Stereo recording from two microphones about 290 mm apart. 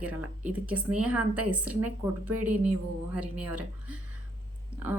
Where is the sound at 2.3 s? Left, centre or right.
Right.